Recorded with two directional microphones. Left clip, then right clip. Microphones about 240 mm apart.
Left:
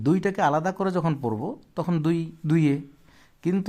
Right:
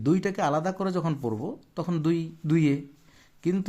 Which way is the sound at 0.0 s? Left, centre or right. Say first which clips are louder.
Left 3 dB; centre.